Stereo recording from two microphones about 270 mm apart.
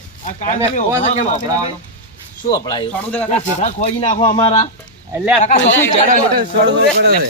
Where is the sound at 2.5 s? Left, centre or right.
Centre.